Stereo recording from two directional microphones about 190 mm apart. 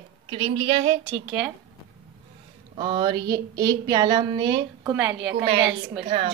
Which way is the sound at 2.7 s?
25° right (ahead or behind).